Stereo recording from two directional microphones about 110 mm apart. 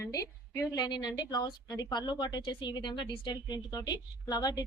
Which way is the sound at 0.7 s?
40° left (ahead or behind).